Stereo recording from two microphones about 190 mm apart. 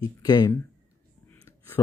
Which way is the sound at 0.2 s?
20° left (ahead or behind).